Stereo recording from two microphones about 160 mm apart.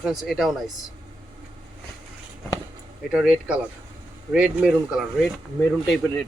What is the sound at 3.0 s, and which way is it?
Speech, 5° right (ahead or behind).